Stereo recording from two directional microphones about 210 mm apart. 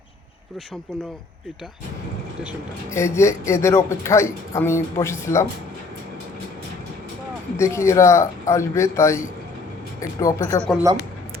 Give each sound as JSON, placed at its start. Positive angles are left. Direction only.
{"t": 2.9, "sound": "speech", "side_deg": 15}
{"t": 7.5, "sound": "speech", "side_deg": 15}